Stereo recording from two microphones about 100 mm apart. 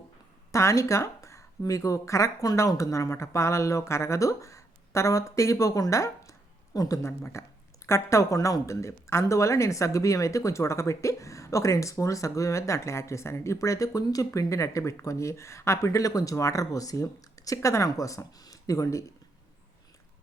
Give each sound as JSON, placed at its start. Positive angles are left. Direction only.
{"t": 0.5, "sound": "speech", "side_deg": 30}